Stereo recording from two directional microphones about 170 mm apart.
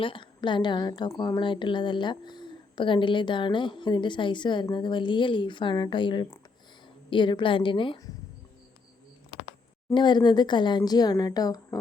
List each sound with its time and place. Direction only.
0.0 s a woman's voice: 30° left (ahead or behind)
9.9 s a woman's voice: 25° left (ahead or behind)